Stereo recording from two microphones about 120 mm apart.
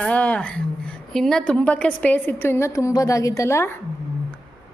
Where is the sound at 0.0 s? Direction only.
10° left (ahead or behind).